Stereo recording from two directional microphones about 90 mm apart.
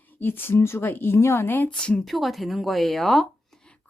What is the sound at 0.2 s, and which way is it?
Speech, 25° left (ahead or behind).